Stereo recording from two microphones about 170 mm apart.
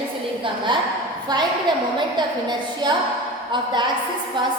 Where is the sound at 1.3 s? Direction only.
25° right (ahead or behind).